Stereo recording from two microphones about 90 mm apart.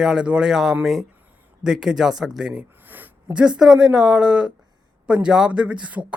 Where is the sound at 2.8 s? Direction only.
20° right (ahead or behind).